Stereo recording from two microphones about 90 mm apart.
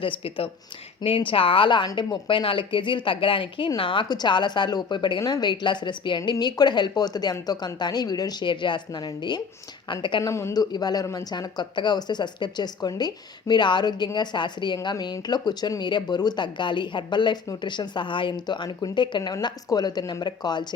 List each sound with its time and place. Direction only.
0.0 s speech: 90° left
1.0 s a woman's voice: 75° left (ahead or behind)
4.1 s speech: 55° left (ahead or behind)
8.4 s speech: 60° left (ahead or behind)
9.9 s speech: 60° left (ahead or behind)
10.2 s speech: 30° left (ahead or behind)
10.5 s speech: 45° left (ahead or behind)